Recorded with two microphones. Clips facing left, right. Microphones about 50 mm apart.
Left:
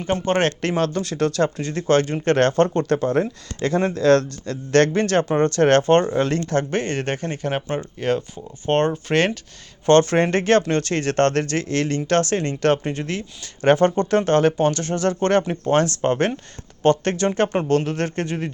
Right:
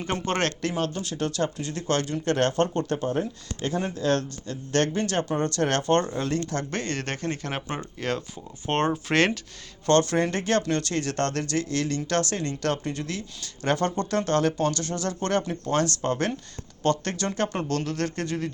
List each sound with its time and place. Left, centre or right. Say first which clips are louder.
0.0 s speech: left 6 dB; centre
0.8 s speech: left 8 dB; left
5.5 s speech: left 9 dB; left
6.1 s speech: left 7 dB; left
6.7 s speech: left 7 dB; left; by 9.4 s centre
9.8 s speech: left 6 dB; left